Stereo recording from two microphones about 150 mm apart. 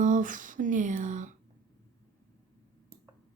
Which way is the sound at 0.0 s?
60° right (ahead or behind).